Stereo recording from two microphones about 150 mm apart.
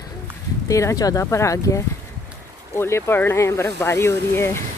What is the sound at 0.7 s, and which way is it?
A woman's voice, 20° left (ahead or behind).